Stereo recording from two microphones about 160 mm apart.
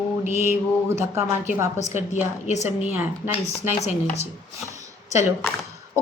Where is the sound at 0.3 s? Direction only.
15° right (ahead or behind).